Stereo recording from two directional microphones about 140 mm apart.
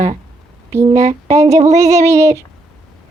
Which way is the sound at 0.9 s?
55° right (ahead or behind).